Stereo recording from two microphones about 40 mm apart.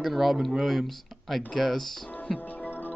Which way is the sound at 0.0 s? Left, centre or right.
Centre.